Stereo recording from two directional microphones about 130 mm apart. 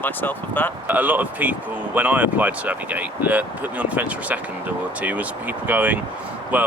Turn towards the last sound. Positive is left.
turn(degrees=-10)  # may be behind; listen again after turning